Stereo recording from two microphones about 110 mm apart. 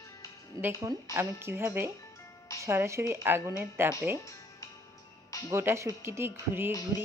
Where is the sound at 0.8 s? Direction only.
35° right (ahead or behind).